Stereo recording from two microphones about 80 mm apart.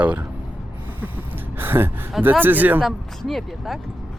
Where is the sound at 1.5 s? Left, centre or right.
Right.